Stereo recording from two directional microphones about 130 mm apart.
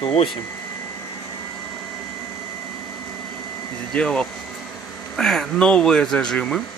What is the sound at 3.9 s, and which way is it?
Speech, 5° left (ahead or behind).